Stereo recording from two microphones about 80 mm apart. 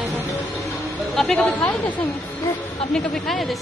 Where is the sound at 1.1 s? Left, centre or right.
Centre.